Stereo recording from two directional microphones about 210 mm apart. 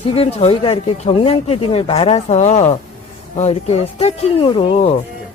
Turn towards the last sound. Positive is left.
turn(degrees=25)  # may be behind; listen again after turning